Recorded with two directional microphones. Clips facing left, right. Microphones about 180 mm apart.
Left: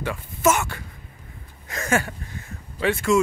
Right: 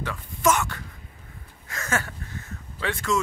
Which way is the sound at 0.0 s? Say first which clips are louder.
Left 3 dB; 10° left (ahead or behind).